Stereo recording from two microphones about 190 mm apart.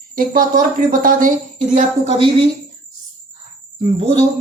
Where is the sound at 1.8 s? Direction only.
30° right (ahead or behind).